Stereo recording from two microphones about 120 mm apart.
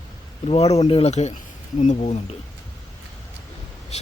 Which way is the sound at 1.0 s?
70° left (ahead or behind).